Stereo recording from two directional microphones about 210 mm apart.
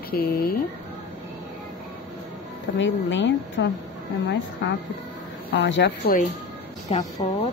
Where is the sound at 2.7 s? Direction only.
60° left (ahead or behind).